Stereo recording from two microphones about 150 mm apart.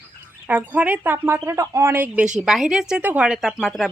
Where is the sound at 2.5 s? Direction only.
5° right (ahead or behind).